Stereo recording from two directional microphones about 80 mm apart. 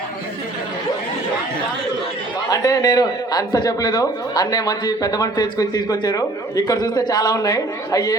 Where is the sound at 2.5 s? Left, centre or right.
Left.